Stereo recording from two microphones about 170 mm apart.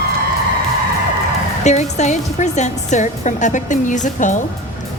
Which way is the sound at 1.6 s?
40° left (ahead or behind).